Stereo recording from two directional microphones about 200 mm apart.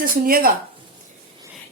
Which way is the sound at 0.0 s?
45° right (ahead or behind).